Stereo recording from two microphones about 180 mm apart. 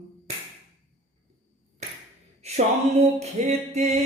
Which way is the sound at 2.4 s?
35° right (ahead or behind).